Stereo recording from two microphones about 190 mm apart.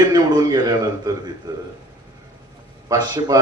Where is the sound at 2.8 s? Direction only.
20° right (ahead or behind).